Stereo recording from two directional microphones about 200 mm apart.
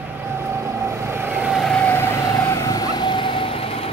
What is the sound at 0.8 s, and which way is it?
Vehicle, 15° right (ahead or behind).